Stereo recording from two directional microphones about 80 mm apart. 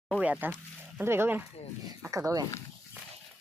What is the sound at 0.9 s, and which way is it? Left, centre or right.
Speech, right.